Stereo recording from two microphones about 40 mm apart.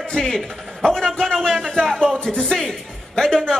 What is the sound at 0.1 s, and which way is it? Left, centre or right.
Music, centre.